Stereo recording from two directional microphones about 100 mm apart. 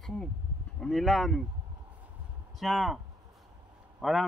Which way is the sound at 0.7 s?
Centre (ahead or behind).